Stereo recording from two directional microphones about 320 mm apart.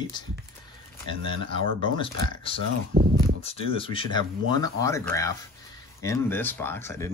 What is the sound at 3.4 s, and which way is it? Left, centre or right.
Speech, centre.